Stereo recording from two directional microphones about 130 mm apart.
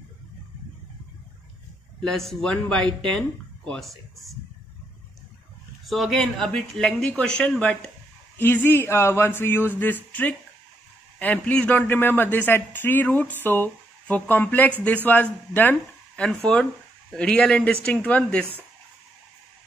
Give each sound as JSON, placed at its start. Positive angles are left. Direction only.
{"t": 2.0, "sound": "speech", "side_deg": 5}
{"t": 5.9, "sound": "a man's voice", "side_deg": 0}
{"t": 11.1, "sound": "a man's voice", "side_deg": 10}